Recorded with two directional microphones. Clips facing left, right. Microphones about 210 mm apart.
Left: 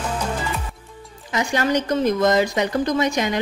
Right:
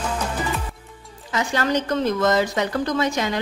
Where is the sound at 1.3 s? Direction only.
15° left (ahead or behind).